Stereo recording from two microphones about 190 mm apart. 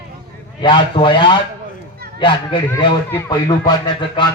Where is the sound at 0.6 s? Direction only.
25° left (ahead or behind).